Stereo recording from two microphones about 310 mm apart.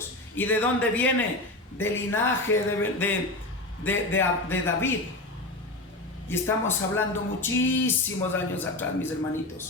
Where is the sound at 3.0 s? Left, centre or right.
Centre.